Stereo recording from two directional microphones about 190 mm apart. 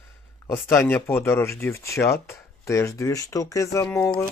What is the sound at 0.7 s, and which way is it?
Speech, 10° left (ahead or behind).